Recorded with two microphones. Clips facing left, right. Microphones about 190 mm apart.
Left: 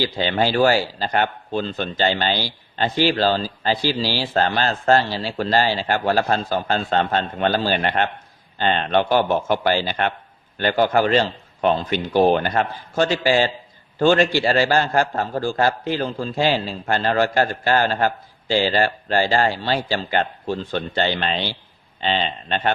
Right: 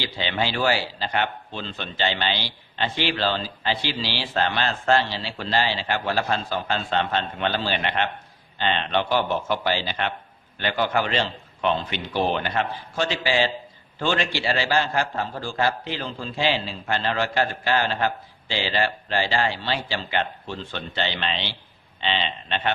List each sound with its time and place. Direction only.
0.0 s a man's voice: 45° left (ahead or behind)